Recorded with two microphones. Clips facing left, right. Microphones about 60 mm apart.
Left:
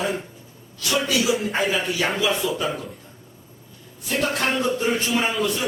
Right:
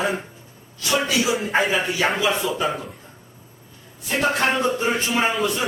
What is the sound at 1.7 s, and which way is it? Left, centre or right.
Speech, centre.